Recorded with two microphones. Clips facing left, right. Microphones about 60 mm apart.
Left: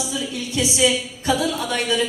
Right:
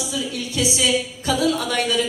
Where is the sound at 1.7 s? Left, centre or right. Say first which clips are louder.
Even; left.